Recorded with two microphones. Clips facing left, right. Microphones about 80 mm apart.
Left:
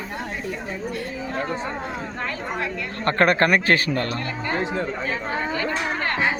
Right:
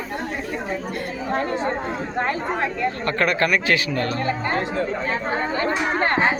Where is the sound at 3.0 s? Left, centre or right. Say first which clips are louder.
Left 5 dB; left.